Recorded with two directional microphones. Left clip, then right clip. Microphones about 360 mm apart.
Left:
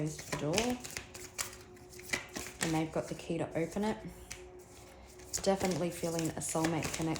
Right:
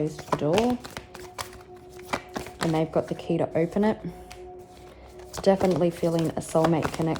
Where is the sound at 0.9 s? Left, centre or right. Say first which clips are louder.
Right 5 dB; centre.